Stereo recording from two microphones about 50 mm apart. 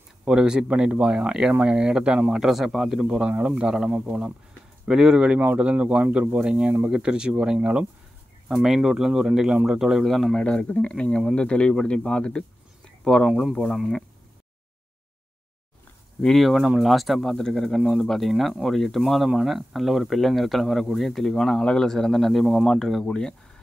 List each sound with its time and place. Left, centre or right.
0.2 s speech: centre
2.4 s a man's voice: centre
3.3 s speech: right
3.6 s speech: centre
8.6 s speech: centre
10.3 s speech: centre
16.3 s a man's voice: centre